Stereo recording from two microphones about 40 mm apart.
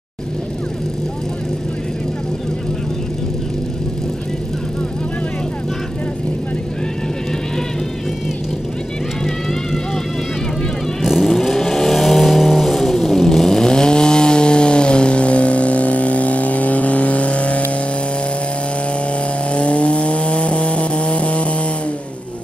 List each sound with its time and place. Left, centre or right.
11.0 s vehicle: centre; by 17.6 s left
19.5 s vehicle: left